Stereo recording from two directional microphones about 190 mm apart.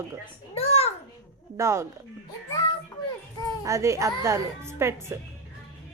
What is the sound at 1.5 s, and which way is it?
Speech, 15° right (ahead or behind).